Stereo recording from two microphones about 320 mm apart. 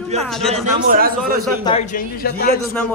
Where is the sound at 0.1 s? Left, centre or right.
Right.